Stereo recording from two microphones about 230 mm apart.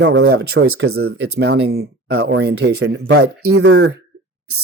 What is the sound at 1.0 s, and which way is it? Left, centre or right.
Speech, right.